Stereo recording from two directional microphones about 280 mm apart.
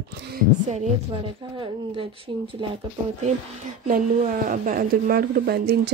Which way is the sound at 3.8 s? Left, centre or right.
Right.